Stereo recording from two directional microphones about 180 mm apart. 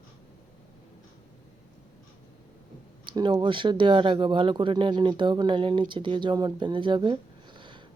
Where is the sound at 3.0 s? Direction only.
25° right (ahead or behind).